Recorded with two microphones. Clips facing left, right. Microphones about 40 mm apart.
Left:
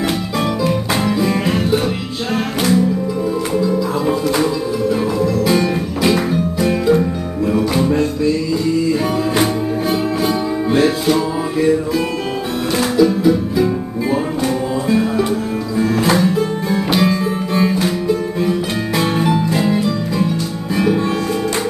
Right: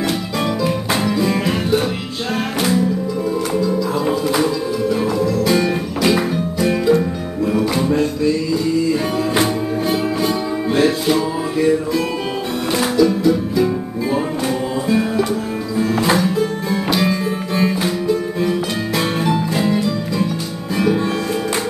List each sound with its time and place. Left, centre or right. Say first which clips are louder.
1.0 s music: left 1 dB; centre
9.4 s music: left 1 dB; centre
12.7 s music: left 1 dB; centre
14.9 s music: left 1 dB; centre